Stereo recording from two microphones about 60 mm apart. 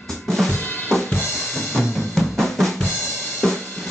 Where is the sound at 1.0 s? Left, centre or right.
Left.